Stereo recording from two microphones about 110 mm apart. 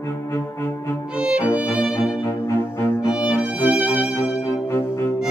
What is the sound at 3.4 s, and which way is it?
Music, 15° right (ahead or behind).